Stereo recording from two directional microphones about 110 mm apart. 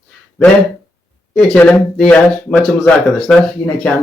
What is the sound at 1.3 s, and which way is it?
Speech, 10° left (ahead or behind).